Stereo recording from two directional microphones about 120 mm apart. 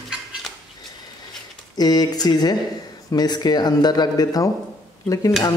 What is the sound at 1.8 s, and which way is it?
A man's voice, 35° left (ahead or behind).